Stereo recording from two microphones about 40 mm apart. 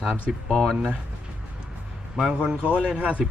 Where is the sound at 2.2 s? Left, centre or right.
Right.